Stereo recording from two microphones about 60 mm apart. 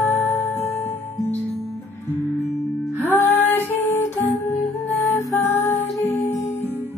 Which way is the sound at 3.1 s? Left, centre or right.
Left.